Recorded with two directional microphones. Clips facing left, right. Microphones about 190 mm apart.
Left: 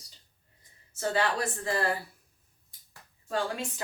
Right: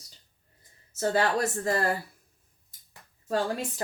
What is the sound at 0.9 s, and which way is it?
Speech, 40° right (ahead or behind).